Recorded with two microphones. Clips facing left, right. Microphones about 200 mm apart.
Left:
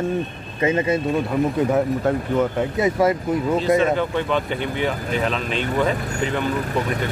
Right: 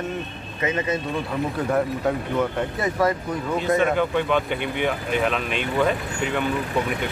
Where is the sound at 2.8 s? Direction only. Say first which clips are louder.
Left 4 dB; 20° left (ahead or behind).